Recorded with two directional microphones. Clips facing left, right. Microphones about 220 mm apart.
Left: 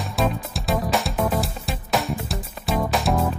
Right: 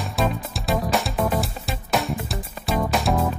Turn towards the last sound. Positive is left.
turn(degrees=0)  # may be behind; listen again after turning